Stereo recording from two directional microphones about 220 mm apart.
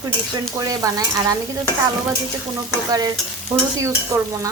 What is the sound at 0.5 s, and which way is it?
Speech, 15° right (ahead or behind).